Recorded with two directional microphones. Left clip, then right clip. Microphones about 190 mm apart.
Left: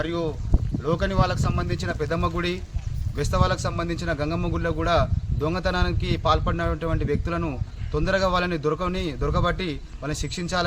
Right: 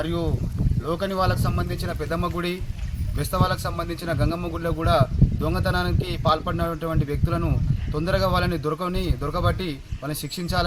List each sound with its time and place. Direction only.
0.0 s a man's voice: 5° left (ahead or behind)
10.1 s a man's voice: 30° left (ahead or behind)